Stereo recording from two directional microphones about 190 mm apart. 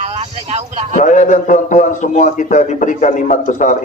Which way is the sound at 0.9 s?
40° left (ahead or behind).